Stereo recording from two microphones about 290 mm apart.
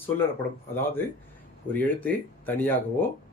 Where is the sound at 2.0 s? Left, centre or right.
Centre.